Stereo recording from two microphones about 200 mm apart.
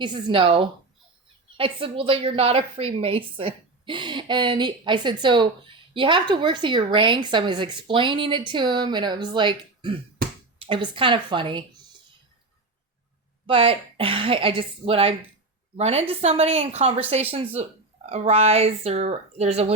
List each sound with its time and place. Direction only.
0.0 s a woman's voice: 25° right (ahead or behind)
13.5 s a woman's voice: 25° right (ahead or behind)